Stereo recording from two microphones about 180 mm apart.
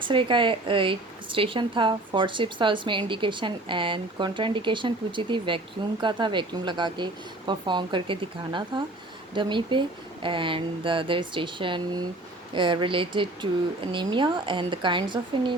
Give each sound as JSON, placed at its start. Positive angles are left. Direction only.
{"t": 0.0, "sound": "a woman's voice", "side_deg": -25}